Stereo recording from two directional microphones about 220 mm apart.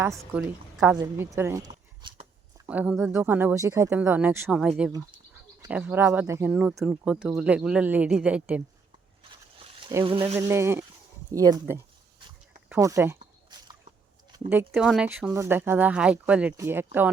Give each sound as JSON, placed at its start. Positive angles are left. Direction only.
{"t": 0.8, "sound": "speech", "side_deg": -10}
{"t": 2.0, "sound": "a sound", "side_deg": -20}
{"t": 2.6, "sound": "speech", "side_deg": -5}
{"t": 4.9, "sound": "speech", "side_deg": -15}
{"t": 9.8, "sound": "speech", "side_deg": -20}
{"t": 10.3, "sound": "speech", "side_deg": -10}
{"t": 14.3, "sound": "a sound", "side_deg": -15}
{"t": 14.7, "sound": "speech", "side_deg": 0}